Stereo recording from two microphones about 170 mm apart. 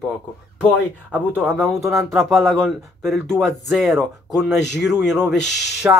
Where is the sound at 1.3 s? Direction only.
10° right (ahead or behind).